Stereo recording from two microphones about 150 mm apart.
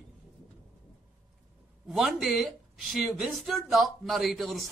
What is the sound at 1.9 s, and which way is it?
Speech, centre (ahead or behind).